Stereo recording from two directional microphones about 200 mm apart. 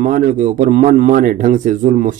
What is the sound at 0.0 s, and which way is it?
A man's voice, 40° right (ahead or behind).